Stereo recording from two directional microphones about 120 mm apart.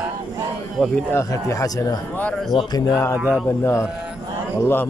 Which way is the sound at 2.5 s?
50° left (ahead or behind).